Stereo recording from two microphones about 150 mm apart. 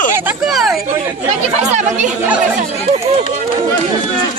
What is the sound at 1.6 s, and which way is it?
Speech, 50° right (ahead or behind).